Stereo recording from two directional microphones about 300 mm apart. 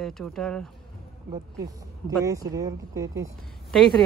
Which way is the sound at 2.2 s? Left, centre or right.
Centre.